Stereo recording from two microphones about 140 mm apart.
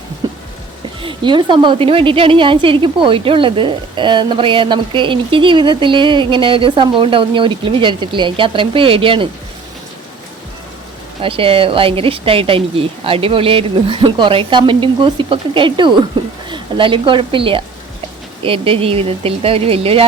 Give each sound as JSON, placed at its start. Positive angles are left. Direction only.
{"t": 0.2, "sound": "a sound", "side_deg": -30}
{"t": 1.0, "sound": "a woman's voice", "side_deg": -35}
{"t": 11.2, "sound": "a woman's voice", "side_deg": -40}